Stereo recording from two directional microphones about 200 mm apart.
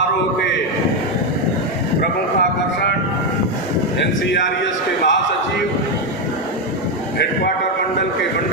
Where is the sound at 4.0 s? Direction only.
65° left (ahead or behind).